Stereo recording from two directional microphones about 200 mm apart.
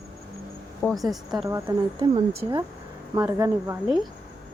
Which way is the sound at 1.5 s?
15° right (ahead or behind).